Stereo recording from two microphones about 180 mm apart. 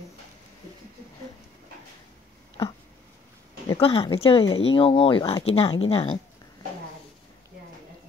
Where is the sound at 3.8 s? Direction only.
30° left (ahead or behind).